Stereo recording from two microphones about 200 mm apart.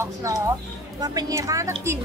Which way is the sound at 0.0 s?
15° right (ahead or behind).